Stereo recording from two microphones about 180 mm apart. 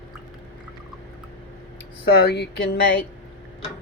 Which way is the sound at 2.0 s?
65° left (ahead or behind).